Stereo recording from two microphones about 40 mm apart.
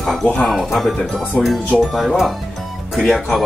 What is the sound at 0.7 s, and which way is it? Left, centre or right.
Speech, centre.